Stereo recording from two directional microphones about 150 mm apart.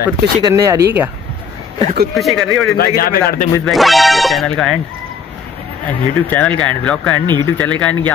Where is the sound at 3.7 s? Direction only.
Centre (ahead or behind).